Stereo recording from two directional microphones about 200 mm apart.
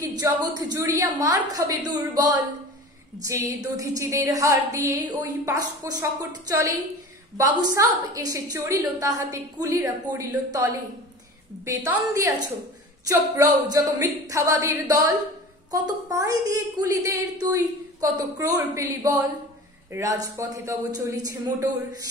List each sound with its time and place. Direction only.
0.0 s a woman's voice: 20° right (ahead or behind)